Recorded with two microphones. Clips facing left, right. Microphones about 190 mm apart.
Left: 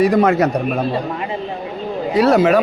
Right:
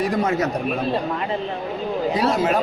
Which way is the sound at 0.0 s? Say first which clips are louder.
Left 7 dB; 65° left (ahead or behind).